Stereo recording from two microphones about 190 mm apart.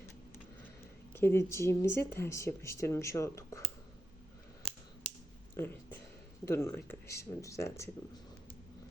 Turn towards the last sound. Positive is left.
turn(degrees=15)  # may be behind; listen again after turning